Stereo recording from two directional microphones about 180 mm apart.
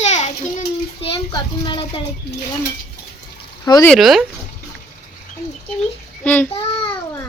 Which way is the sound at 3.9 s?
Centre (ahead or behind).